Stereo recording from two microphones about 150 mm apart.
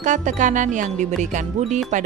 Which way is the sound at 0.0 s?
55° right (ahead or behind).